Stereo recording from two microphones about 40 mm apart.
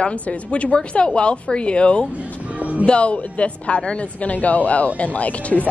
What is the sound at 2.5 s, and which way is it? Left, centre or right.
Music, right.